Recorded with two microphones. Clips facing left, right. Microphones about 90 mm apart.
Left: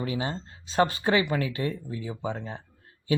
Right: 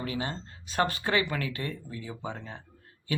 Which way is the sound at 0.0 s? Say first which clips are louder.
Left 3 dB; 25° left (ahead or behind).